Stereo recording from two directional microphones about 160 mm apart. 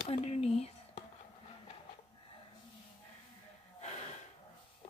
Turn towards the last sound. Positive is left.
turn(degrees=45)  # may be behind; listen again after turning